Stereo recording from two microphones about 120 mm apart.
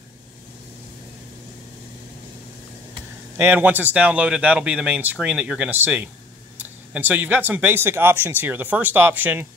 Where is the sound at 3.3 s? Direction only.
15° right (ahead or behind).